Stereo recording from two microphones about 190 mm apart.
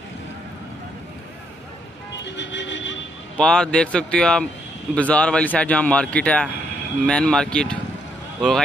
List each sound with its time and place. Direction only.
2.2 s vehicle: 70° left (ahead or behind)
3.3 s speech: 5° left (ahead or behind)